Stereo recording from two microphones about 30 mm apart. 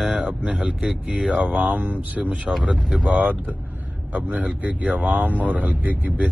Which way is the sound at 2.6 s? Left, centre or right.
Right.